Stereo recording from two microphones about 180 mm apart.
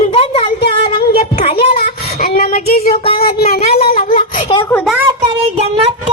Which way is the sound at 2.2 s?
55° left (ahead or behind).